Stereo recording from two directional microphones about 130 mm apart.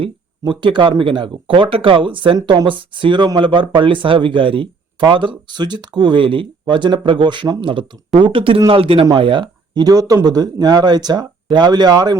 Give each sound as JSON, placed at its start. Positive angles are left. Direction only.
{"t": 0.0, "sound": "a man's voice", "side_deg": -40}